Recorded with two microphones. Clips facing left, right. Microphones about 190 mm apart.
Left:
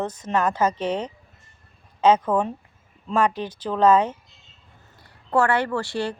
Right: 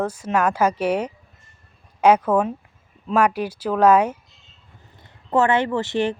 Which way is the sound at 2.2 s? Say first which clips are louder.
Right 3 dB; 5° right (ahead or behind).